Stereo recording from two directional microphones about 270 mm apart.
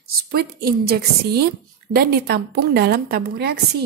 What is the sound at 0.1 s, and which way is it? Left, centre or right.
A woman's voice, right.